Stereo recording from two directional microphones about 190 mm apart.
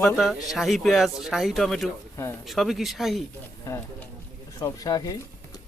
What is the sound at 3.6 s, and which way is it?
Speech, 15° left (ahead or behind).